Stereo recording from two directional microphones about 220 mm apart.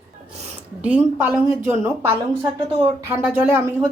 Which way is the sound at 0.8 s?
5° right (ahead or behind).